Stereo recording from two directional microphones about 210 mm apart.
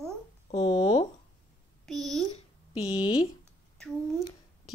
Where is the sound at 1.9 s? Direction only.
Centre (ahead or behind).